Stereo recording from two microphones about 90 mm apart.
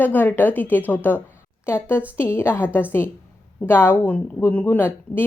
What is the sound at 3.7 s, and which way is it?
A woman's voice, 25° left (ahead or behind).